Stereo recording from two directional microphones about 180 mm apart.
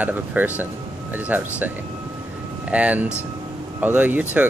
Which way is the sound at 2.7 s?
10° right (ahead or behind).